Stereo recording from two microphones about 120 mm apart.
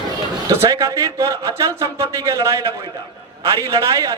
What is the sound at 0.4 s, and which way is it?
A man's voice, 25° right (ahead or behind).